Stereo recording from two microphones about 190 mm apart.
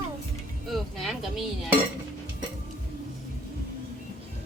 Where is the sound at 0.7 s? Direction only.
Centre (ahead or behind).